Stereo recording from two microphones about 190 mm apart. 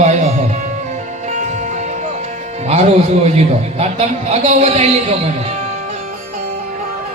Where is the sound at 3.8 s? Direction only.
35° right (ahead or behind).